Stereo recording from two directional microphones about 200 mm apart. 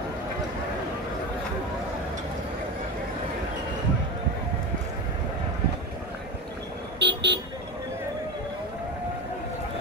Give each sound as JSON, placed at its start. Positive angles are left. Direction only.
{"t": 7.0, "sound": "vehicle", "side_deg": -60}